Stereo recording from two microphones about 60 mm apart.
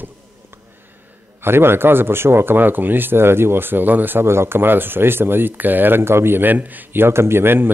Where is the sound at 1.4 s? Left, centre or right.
Right.